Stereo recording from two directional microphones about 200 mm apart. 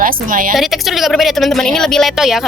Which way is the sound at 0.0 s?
40° right (ahead or behind).